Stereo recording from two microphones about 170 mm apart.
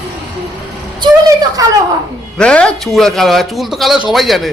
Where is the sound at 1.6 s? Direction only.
20° right (ahead or behind).